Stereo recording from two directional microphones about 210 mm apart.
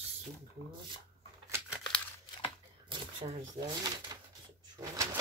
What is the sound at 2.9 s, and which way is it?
Speech, 25° right (ahead or behind).